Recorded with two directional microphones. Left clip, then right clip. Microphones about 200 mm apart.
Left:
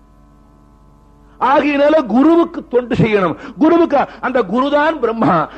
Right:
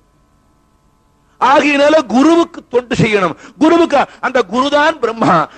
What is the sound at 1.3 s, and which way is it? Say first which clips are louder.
A man's voice: right 3 dB; 20° right (ahead or behind).